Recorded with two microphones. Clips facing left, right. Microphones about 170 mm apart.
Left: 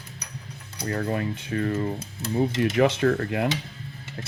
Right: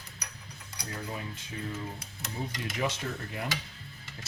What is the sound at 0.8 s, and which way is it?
Speech, 70° left (ahead or behind).